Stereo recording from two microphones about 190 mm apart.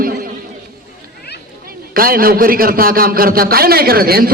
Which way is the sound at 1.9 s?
50° right (ahead or behind).